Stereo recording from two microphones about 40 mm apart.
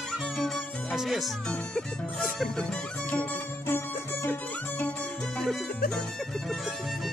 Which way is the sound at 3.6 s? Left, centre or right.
Left.